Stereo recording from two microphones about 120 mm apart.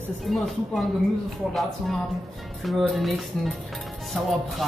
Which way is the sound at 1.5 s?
Centre (ahead or behind).